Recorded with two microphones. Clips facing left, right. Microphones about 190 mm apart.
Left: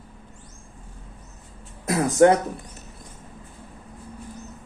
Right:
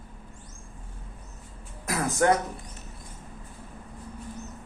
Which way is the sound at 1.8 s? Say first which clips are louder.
Left 7 dB; 25° left (ahead or behind).